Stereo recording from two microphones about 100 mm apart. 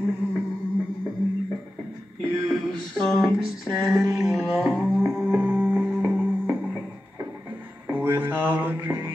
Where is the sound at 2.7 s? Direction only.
5° left (ahead or behind).